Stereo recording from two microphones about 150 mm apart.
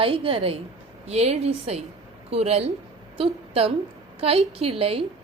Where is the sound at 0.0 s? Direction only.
35° right (ahead or behind).